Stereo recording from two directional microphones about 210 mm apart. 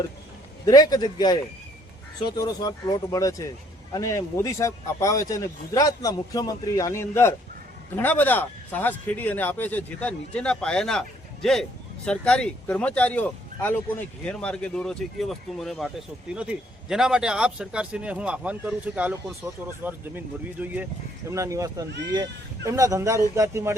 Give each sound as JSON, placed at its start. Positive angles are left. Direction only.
{"t": 0.6, "sound": "a man's voice", "side_deg": 20}
{"t": 12.0, "sound": "speech", "side_deg": 5}